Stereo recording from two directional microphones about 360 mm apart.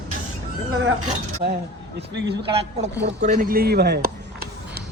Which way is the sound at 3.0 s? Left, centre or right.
Right.